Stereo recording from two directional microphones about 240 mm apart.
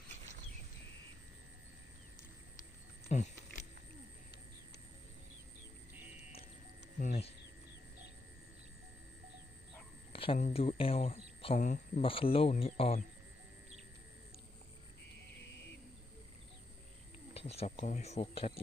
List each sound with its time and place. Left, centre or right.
3.1 s a sound: left
7.0 s speech: left
10.1 s speech: left
17.3 s speech: left